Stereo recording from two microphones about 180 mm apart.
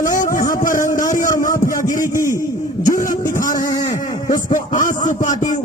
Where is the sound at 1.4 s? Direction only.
50° left (ahead or behind).